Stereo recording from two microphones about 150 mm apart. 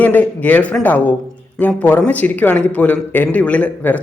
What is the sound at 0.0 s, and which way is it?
Speech, 10° left (ahead or behind).